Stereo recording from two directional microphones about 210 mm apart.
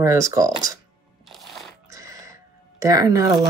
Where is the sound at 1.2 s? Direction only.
Centre (ahead or behind).